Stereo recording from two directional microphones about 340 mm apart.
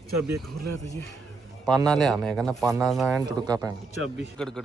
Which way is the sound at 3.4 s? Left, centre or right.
Centre.